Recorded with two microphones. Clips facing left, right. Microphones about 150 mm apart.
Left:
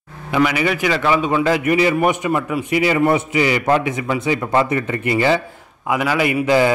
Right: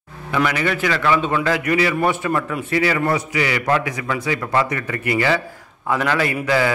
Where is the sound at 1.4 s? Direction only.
25° left (ahead or behind).